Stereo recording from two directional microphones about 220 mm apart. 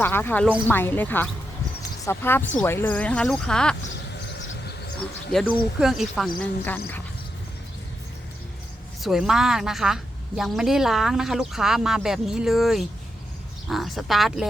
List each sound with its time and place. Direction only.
0.0 s a woman's voice: 10° left (ahead or behind)
4.2 s a sound: 50° left (ahead or behind)
5.3 s a woman's voice: centre (ahead or behind)
9.0 s a woman's voice: centre (ahead or behind)